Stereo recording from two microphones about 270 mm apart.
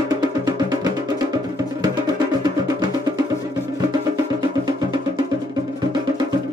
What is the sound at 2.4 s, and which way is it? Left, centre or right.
Music, centre.